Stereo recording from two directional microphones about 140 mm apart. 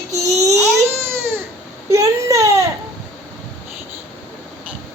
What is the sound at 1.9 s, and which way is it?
Baby cry, 20° right (ahead or behind).